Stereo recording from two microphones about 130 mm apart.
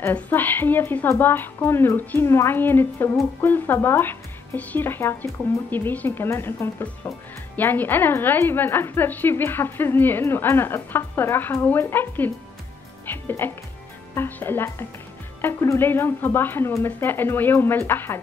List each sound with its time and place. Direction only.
0.0 s speech: 15° left (ahead or behind)
13.0 s music: 15° left (ahead or behind)
14.1 s speech: 15° left (ahead or behind)